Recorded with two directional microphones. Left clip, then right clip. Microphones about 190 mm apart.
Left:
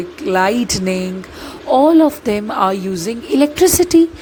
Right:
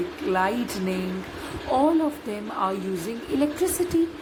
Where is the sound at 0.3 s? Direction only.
50° left (ahead or behind).